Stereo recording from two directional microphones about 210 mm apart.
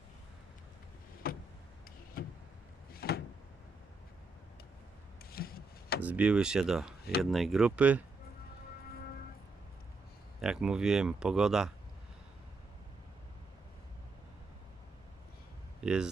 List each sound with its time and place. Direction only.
1.2 s vehicle: 45° left (ahead or behind)
2.9 s door: 45° left (ahead or behind)
5.2 s wood: 45° left (ahead or behind)
6.0 s speech: 5° right (ahead or behind)
10.4 s speech: 5° right (ahead or behind)
15.8 s speech: 5° right (ahead or behind)